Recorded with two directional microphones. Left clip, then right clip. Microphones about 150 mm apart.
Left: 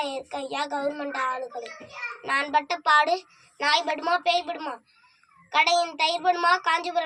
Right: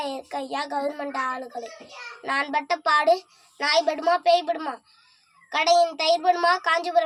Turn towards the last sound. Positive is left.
turn(degrees=-45)  # may be behind; listen again after turning